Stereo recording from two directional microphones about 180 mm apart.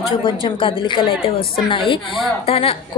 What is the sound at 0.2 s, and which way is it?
A woman's voice, 30° left (ahead or behind).